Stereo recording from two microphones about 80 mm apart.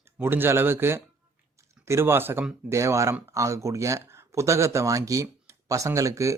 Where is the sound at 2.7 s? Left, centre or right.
Right.